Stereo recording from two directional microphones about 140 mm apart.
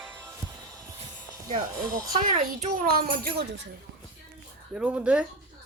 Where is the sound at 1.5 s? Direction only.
65° right (ahead or behind); by 3.4 s 90° right.